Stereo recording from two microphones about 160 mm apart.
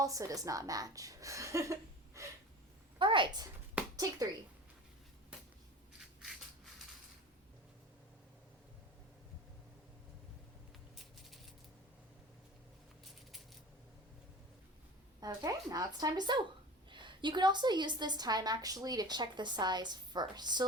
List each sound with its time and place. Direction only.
0.0 s a woman's voice: 20° right (ahead or behind)
3.0 s a woman's voice: 30° right (ahead or behind)
3.8 s a sound: 10° right (ahead or behind)
15.2 s a woman's voice: 20° right (ahead or behind)